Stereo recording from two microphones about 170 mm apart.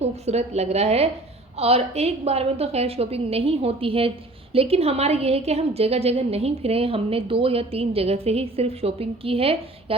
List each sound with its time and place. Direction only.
0.0 s a woman's voice: 40° right (ahead or behind)